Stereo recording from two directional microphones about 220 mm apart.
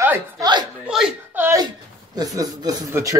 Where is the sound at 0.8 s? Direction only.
5° right (ahead or behind).